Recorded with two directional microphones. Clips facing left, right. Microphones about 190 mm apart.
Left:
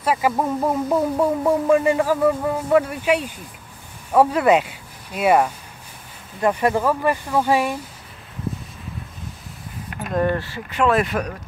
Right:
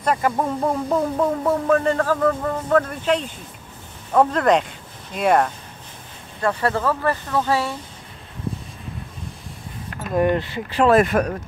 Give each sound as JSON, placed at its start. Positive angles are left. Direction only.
{"t": 0.0, "sound": "speech", "side_deg": 5}
{"t": 10.1, "sound": "speech", "side_deg": -15}
{"t": 10.7, "sound": "speech", "side_deg": -35}